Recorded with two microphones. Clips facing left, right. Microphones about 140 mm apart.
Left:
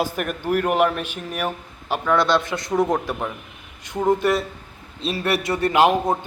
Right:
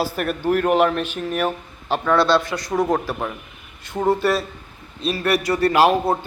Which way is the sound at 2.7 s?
Centre (ahead or behind).